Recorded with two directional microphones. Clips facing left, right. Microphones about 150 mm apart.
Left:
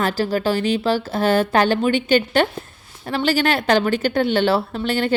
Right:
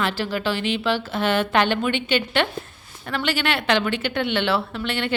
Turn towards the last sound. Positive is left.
turn(degrees=40)  # may be behind; listen again after turning